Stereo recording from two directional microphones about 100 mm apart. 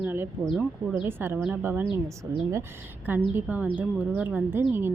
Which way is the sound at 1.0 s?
25° right (ahead or behind).